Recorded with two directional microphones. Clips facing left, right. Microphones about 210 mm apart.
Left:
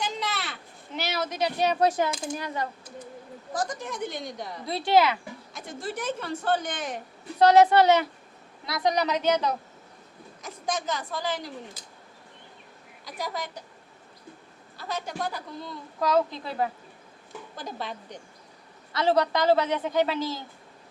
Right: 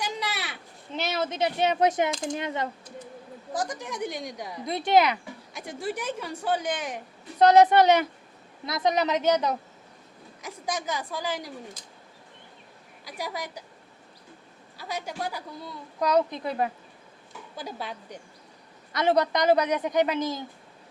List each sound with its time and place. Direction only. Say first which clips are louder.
0.0 s a sound: left 1 dB; 10° right (ahead or behind)
0.9 s a woman's voice: right 1 dB; 25° right (ahead or behind)
13.1 s a man's voice: left 1 dB; 10° right (ahead or behind)
14.8 s a man's voice: left 1 dB; 10° right (ahead or behind)
17.6 s a man's voice: even; 10° right (ahead or behind)
18.9 s a man's voice: even; 20° right (ahead or behind)